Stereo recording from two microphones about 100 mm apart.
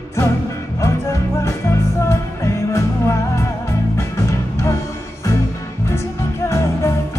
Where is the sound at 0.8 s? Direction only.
30° left (ahead or behind).